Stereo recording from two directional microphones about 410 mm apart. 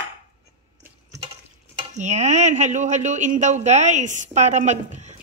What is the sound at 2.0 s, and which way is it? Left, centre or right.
Speech, centre.